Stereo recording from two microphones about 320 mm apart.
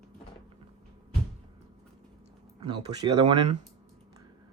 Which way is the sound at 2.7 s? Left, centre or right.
Centre.